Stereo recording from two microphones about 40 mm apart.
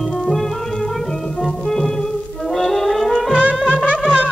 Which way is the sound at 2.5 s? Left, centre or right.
Centre.